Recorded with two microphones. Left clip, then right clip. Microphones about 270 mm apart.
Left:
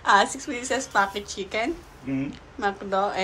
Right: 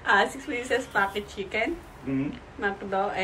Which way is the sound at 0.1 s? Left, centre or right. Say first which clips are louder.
Left 3 dB; centre.